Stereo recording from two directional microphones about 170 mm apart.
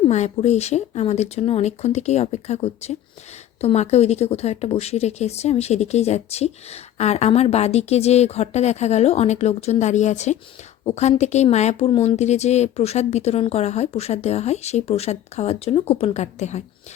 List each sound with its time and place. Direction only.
0.0 s a woman's voice: 40° left (ahead or behind)